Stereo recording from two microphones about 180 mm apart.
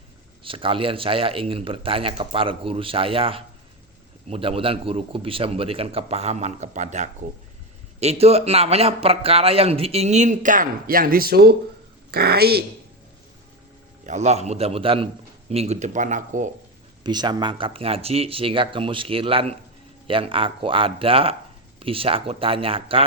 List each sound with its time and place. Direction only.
0.4 s a man's voice: 30° right (ahead or behind); by 12.6 s 60° right (ahead or behind)
14.0 s a man's voice: 40° right (ahead or behind)
17.0 s a man's voice: 25° right (ahead or behind)